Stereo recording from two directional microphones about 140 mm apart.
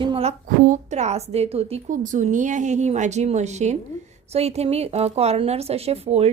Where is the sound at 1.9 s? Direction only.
65° right (ahead or behind).